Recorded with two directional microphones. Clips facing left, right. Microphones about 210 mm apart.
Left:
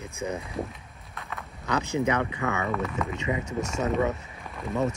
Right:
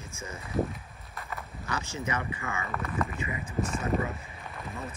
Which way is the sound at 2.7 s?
Centre (ahead or behind).